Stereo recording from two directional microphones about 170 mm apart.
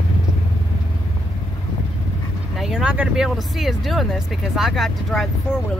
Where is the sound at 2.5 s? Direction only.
Centre (ahead or behind).